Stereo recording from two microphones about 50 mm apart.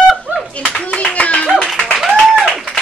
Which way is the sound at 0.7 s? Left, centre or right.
Left.